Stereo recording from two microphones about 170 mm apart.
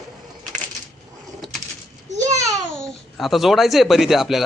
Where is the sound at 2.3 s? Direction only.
20° right (ahead or behind).